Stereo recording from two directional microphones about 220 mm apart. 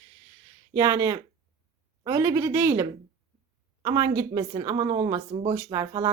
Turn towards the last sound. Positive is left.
turn(degrees=-20)  # may be behind; listen again after turning